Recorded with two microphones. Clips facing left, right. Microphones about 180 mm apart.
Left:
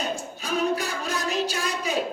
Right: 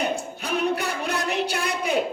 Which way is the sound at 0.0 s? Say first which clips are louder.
Right 4 dB; 65° right (ahead or behind).